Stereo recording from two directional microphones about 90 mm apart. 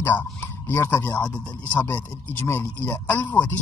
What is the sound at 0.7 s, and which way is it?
A man's voice, 20° left (ahead or behind).